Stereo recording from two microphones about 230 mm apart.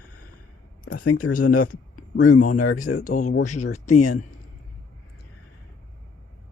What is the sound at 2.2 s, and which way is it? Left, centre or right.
Speech, left.